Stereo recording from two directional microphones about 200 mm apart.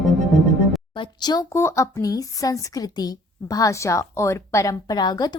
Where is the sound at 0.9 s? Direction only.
20° left (ahead or behind).